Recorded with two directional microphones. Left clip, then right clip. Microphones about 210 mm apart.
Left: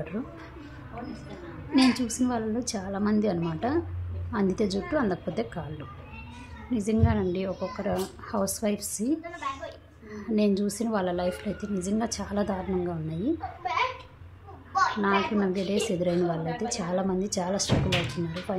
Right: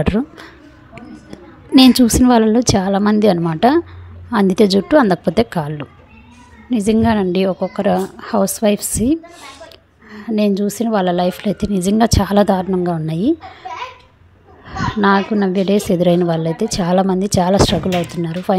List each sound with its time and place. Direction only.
1.8 s a woman's voice: 45° right (ahead or behind)
15.0 s a woman's voice: 40° right (ahead or behind)